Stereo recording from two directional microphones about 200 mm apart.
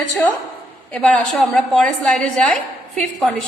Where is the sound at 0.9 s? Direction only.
5° left (ahead or behind).